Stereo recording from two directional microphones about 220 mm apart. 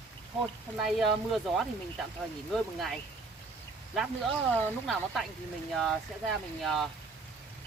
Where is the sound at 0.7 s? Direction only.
Centre (ahead or behind).